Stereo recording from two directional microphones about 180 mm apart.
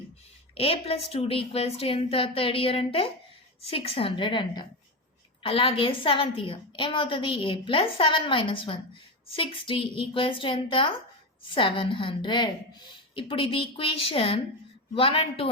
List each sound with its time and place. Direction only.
0.5 s a woman's voice: 30° left (ahead or behind)